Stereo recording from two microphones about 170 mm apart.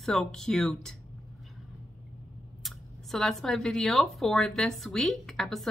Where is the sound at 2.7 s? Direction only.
Centre (ahead or behind).